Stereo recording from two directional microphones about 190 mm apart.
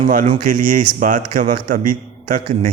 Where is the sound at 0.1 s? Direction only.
45° right (ahead or behind).